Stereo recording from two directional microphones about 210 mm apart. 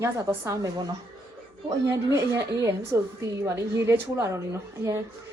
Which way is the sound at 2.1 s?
15° right (ahead or behind).